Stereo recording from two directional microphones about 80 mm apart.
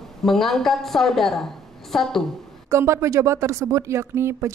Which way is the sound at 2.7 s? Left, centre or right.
Right.